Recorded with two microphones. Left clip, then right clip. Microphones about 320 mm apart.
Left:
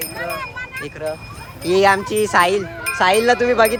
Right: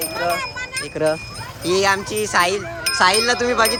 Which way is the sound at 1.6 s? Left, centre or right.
Centre.